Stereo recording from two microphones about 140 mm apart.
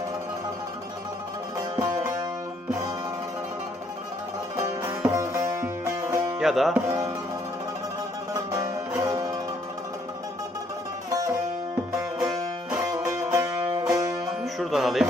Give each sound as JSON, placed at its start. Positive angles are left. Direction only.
{"t": 1.7, "sound": "music", "side_deg": -25}
{"t": 4.5, "sound": "music", "side_deg": -20}
{"t": 6.4, "sound": "music", "side_deg": 0}
{"t": 6.8, "sound": "music", "side_deg": -25}
{"t": 8.9, "sound": "music", "side_deg": -20}
{"t": 12.2, "sound": "music", "side_deg": -25}
{"t": 14.6, "sound": "music", "side_deg": 0}